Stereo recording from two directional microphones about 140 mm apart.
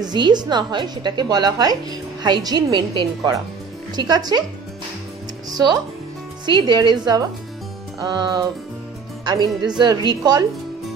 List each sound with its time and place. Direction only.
0.0 s a woman's voice: 30° right (ahead or behind)
5.5 s a woman's voice: 30° right (ahead or behind)